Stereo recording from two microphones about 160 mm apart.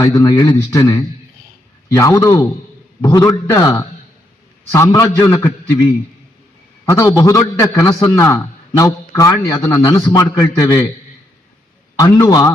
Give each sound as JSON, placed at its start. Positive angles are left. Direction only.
{"t": 0.0, "sound": "a man's voice", "side_deg": 20}
{"t": 6.8, "sound": "a man's voice", "side_deg": 20}
{"t": 11.9, "sound": "a man's voice", "side_deg": 20}